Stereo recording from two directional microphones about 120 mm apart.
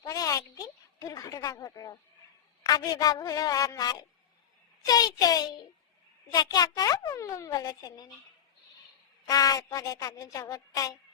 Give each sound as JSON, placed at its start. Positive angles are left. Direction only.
{"t": 0.0, "sound": "a sound", "side_deg": 30}
{"t": 2.6, "sound": "a child's voice", "side_deg": 35}
{"t": 9.2, "sound": "a woman's voice", "side_deg": 30}